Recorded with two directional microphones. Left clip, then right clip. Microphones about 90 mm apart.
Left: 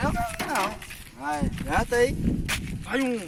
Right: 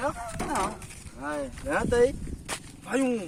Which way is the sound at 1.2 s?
90° left.